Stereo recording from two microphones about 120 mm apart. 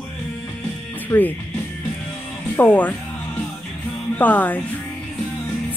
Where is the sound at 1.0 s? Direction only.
15° left (ahead or behind).